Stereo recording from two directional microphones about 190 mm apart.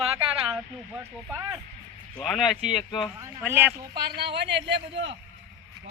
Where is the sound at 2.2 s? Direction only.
Centre (ahead or behind).